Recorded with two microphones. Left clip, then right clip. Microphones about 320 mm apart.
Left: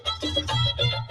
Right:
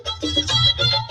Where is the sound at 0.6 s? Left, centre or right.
Centre.